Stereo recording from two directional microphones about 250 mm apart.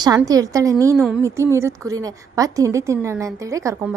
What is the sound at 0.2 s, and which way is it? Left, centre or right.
A woman's voice, centre.